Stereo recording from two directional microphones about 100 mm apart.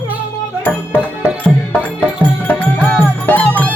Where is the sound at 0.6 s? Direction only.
20° left (ahead or behind).